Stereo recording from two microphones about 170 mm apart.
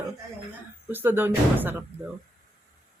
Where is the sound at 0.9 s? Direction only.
10° right (ahead or behind).